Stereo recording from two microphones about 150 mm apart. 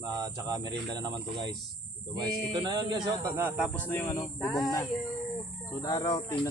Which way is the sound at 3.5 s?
Centre (ahead or behind).